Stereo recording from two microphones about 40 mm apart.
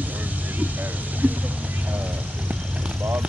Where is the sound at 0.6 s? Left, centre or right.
Right.